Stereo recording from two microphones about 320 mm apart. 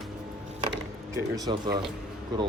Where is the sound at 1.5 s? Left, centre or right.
Centre.